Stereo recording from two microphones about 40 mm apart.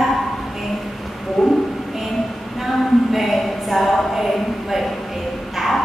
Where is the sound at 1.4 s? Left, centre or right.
Centre.